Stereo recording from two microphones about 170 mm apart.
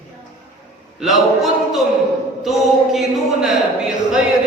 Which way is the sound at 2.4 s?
Centre (ahead or behind).